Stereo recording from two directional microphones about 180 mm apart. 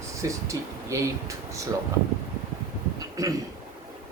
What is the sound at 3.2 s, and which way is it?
Speech, 20° right (ahead or behind).